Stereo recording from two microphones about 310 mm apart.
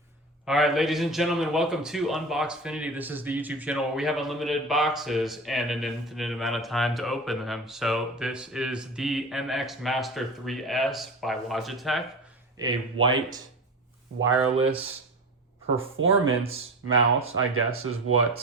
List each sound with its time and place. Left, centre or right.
0.4 s a man's voice: centre
12.5 s speech: centre
15.8 s speech: right